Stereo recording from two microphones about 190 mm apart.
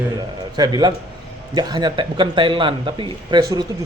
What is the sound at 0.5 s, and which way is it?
Speech, 20° right (ahead or behind).